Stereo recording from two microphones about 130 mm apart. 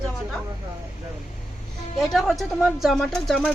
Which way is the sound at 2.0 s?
Centre (ahead or behind).